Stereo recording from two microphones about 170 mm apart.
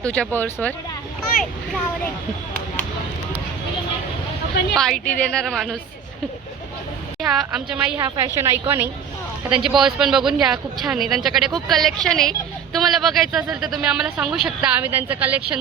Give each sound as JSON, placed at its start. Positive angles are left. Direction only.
{"t": 0.0, "sound": "speech", "side_deg": 5}
{"t": 4.7, "sound": "speech", "side_deg": 0}
{"t": 7.2, "sound": "speech", "side_deg": 0}
{"t": 7.9, "sound": "a woman's voice", "side_deg": -20}
{"t": 9.5, "sound": "a woman's voice", "side_deg": 0}